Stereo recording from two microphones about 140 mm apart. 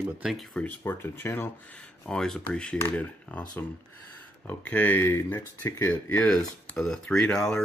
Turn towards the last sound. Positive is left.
turn(degrees=5)  # may be behind; listen again after turning